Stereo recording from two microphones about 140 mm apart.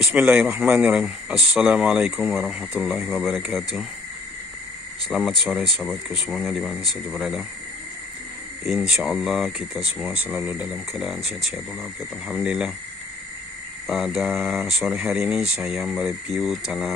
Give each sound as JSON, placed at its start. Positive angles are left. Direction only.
{"t": 0.0, "sound": "speech", "side_deg": -5}
{"t": 5.0, "sound": "speech", "side_deg": 0}
{"t": 8.7, "sound": "speech", "side_deg": -5}
{"t": 13.8, "sound": "speech", "side_deg": 0}